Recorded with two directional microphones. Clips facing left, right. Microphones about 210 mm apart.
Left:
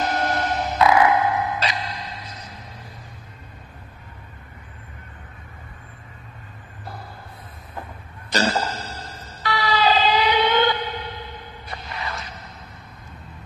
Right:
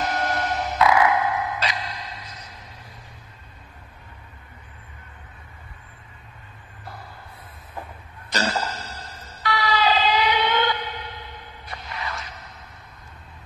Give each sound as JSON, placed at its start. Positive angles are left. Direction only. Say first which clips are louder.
{"t": 0.0, "sound": "music", "louder": "left 2 dB", "side_deg": 30}
{"t": 8.3, "sound": "emergency vehicle", "louder": "left 3 dB", "side_deg": 30}